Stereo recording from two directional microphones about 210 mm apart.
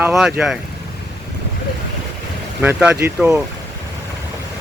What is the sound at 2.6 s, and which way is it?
Speech, 5° right (ahead or behind).